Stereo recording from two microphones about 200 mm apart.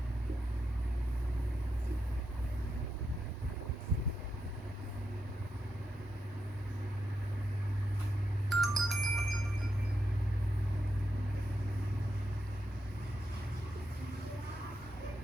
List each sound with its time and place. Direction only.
8.4 s music: centre (ahead or behind)